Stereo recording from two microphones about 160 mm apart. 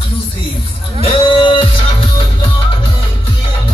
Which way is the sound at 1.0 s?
30° left (ahead or behind).